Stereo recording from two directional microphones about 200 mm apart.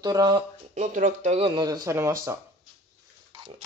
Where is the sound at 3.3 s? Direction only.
25° right (ahead or behind).